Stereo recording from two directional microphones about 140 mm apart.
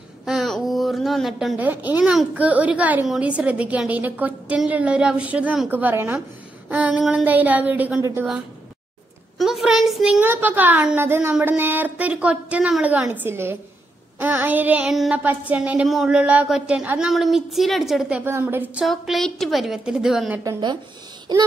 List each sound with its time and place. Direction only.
0.2 s a sound: centre (ahead or behind)
1.6 s speech: 10° right (ahead or behind)
9.4 s a woman's voice: centre (ahead or behind)
10.2 s a woman's voice: 15° right (ahead or behind)
18.2 s speech: 15° right (ahead or behind)
18.9 s a woman's voice: centre (ahead or behind)
21.3 s child singing: 30° right (ahead or behind)